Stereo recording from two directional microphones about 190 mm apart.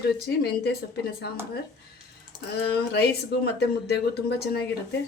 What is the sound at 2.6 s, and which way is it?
Speech, 60° left (ahead or behind).